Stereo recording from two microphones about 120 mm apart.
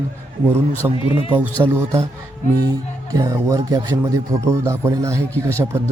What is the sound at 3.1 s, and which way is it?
Speech, 30° right (ahead or behind).